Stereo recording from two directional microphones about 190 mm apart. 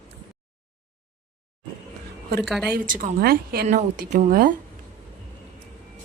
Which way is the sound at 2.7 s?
45° right (ahead or behind).